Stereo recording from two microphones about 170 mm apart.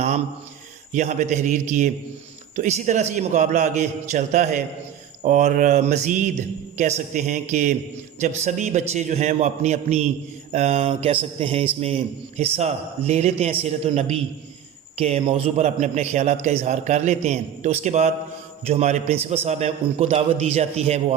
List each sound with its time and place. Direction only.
0.9 s a man's voice: 45° right (ahead or behind)